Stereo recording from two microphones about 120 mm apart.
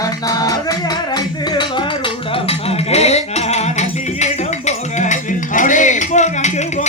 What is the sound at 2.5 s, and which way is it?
Music, 60° left (ahead or behind).